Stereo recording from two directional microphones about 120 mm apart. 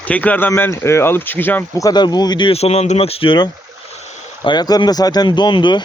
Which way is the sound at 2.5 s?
60° left (ahead or behind).